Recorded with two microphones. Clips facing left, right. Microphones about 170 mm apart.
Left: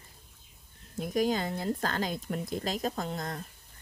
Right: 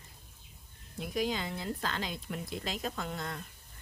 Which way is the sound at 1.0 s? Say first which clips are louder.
Left 5 dB; 45° left (ahead or behind).